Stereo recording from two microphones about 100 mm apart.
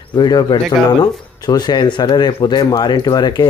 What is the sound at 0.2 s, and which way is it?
A man's voice, 45° left (ahead or behind).